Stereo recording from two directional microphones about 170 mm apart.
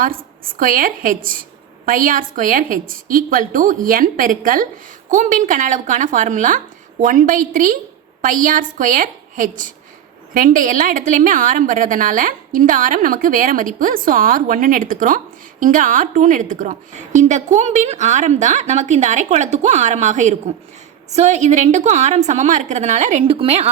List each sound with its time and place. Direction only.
0.6 s a woman's voice: 55° right (ahead or behind); by 23.6 s 35° right (ahead or behind)